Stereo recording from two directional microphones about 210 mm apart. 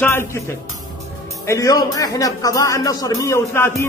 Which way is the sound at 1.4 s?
15° left (ahead or behind).